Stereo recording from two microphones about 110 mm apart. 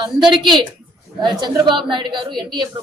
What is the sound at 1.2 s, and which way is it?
A woman's voice, 45° right (ahead or behind).